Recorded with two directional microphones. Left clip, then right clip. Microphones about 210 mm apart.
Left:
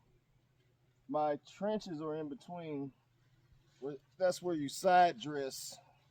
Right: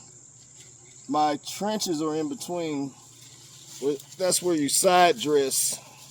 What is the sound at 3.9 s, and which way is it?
Speech, 50° left (ahead or behind).